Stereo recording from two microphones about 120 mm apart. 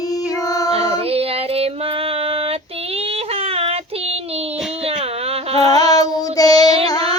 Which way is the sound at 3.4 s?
55° right (ahead or behind).